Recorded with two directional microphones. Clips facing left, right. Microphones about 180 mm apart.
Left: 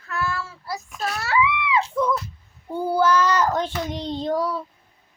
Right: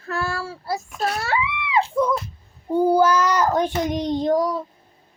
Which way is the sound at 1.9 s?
20° right (ahead or behind).